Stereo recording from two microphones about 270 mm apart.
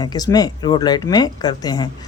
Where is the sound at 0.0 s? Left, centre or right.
Centre.